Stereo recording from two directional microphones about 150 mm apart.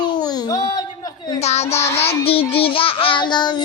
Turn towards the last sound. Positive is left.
turn(degrees=30)  # may be behind; listen again after turning